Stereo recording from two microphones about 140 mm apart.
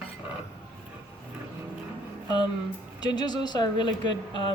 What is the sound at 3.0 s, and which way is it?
A woman's voice, 30° left (ahead or behind).